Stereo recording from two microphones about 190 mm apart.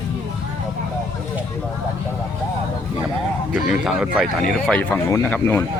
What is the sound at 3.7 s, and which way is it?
Speech, 5° right (ahead or behind).